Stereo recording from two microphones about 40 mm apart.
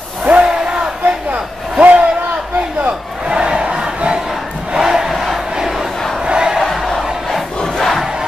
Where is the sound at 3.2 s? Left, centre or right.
Right.